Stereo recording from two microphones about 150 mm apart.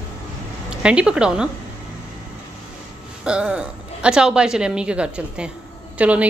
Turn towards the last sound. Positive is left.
turn(degrees=-10)  # may be behind; listen again after turning